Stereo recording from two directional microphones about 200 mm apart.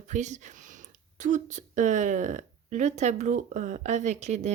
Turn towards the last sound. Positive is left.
turn(degrees=-35)  # may be behind; listen again after turning